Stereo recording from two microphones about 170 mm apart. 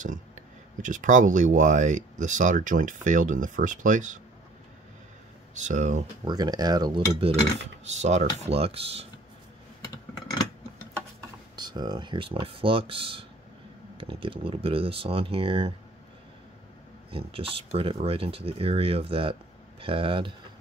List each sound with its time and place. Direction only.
0.8 s speech: 50° right (ahead or behind)
5.5 s speech: 45° right (ahead or behind)
6.2 s speech: 25° right (ahead or behind)
11.5 s speech: 25° right (ahead or behind)
17.3 s speech: 35° right (ahead or behind)